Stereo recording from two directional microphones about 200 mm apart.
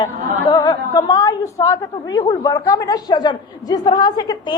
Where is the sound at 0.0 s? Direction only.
20° left (ahead or behind).